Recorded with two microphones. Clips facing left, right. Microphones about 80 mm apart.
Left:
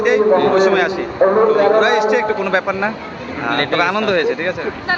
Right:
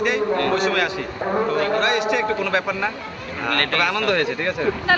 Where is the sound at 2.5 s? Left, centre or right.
Left.